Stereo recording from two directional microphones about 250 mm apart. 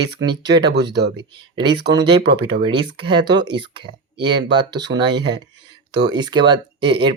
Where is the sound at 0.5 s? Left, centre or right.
Right.